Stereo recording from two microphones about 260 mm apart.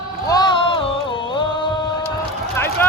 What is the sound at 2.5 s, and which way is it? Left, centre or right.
Run, centre.